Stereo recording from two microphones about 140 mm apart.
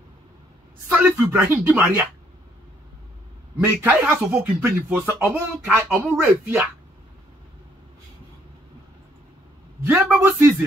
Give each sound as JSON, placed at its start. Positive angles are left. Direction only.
{"t": 0.8, "sound": "speech", "side_deg": -15}
{"t": 3.5, "sound": "speech", "side_deg": -15}
{"t": 9.8, "sound": "speech", "side_deg": -10}